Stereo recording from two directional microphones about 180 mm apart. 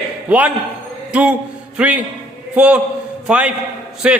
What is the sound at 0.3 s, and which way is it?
A man's voice, 5° right (ahead or behind).